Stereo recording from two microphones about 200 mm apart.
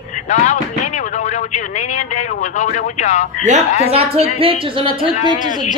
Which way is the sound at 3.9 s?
30° right (ahead or behind).